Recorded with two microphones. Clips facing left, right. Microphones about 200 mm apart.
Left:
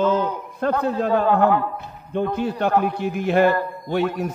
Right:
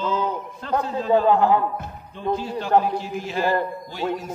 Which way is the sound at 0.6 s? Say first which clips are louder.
Left 6 dB; 60° left (ahead or behind).